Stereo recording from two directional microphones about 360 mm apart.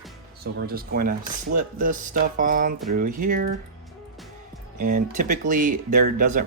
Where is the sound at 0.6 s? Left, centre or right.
Right.